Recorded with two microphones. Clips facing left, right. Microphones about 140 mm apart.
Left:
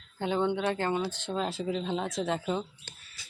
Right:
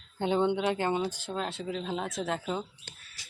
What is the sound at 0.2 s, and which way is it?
Speech, 20° right (ahead or behind).